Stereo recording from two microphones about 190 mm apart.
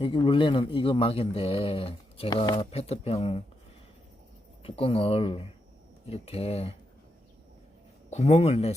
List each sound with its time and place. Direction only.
0.0 s speech: 25° left (ahead or behind)
4.6 s speech: 30° left (ahead or behind)
8.1 s speech: 35° left (ahead or behind)